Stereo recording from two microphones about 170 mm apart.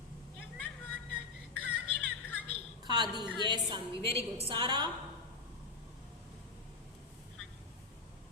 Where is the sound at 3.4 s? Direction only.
25° right (ahead or behind).